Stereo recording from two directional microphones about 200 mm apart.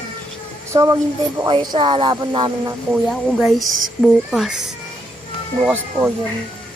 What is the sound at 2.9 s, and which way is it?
Speech, centre (ahead or behind).